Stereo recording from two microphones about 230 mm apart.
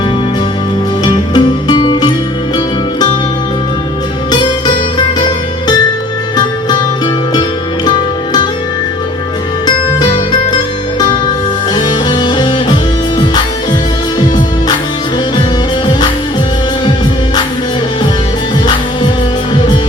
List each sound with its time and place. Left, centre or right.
1.0 s music: centre
4.3 s music: centre
6.3 s music: centre
7.9 s music: centre
9.6 s music: centre
11.7 s music: centre